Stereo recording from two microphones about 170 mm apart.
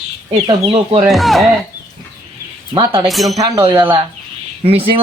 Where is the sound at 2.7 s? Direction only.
25° right (ahead or behind).